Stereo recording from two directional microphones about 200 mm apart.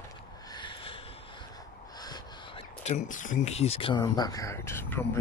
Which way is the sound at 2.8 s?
35° left (ahead or behind).